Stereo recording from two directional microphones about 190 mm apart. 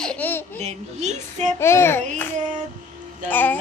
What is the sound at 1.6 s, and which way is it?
Speech, 15° left (ahead or behind).